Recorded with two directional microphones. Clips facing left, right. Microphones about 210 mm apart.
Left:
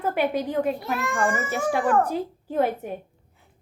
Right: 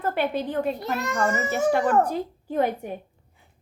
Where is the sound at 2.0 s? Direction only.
5° left (ahead or behind).